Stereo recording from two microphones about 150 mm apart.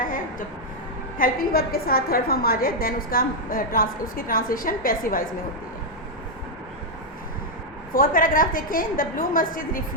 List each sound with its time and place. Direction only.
0.0 s a sound: 65° left (ahead or behind)
1.2 s a woman's voice: 80° left
7.9 s a woman's voice: 70° left (ahead or behind)